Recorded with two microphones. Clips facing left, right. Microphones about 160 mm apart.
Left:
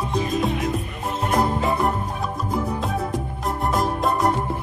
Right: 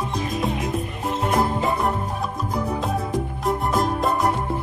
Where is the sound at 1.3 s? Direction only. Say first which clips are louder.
Left 1 dB; centre (ahead or behind).